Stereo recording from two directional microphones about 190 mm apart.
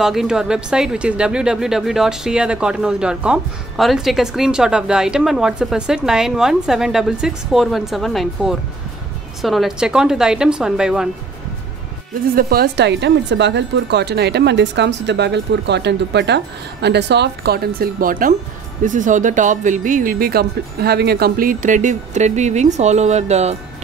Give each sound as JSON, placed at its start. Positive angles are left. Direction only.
{"t": 0.0, "sound": "speech", "side_deg": 0}
{"t": 12.1, "sound": "speech", "side_deg": -50}